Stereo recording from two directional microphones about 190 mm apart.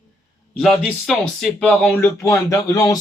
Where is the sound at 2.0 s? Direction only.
15° left (ahead or behind).